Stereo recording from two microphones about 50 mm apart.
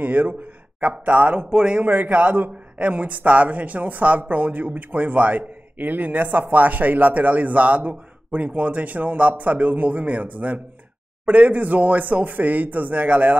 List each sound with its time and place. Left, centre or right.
0.0 s speech: right
1.4 s speech: centre